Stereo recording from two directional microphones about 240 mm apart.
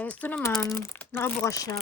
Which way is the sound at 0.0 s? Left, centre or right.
Centre.